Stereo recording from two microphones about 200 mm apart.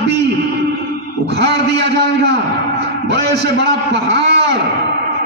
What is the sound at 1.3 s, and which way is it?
A man's voice, 55° right (ahead or behind).